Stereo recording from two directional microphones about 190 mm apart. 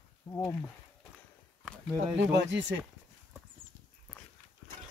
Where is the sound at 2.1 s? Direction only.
65° right (ahead or behind).